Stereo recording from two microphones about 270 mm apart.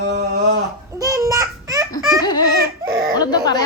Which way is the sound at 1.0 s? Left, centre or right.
Centre.